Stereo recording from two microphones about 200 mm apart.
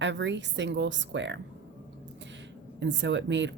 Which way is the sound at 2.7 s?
65° right (ahead or behind).